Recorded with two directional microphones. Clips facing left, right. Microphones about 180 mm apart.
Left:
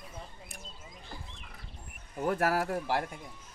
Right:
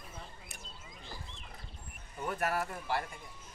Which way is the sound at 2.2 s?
85° left.